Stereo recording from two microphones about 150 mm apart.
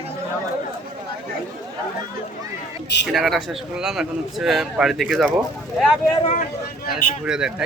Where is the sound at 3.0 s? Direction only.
Centre (ahead or behind).